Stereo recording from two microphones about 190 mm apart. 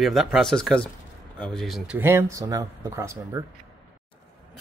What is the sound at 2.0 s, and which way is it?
Speech, 15° right (ahead or behind).